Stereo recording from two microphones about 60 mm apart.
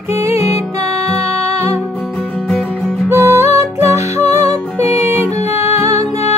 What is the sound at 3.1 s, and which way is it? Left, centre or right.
Music, right.